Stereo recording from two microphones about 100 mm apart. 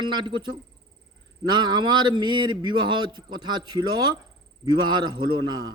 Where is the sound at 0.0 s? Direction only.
50° right (ahead or behind).